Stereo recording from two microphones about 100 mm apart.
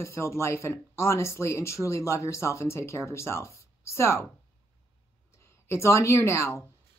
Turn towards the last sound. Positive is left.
turn(degrees=25)  # may be behind; listen again after turning